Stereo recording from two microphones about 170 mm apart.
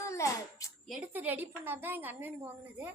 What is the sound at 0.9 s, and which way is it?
Speech, 10° right (ahead or behind).